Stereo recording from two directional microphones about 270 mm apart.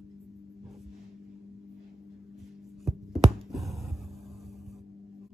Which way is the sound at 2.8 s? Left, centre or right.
Centre.